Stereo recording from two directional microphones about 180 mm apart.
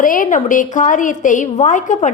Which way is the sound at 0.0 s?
50° left (ahead or behind).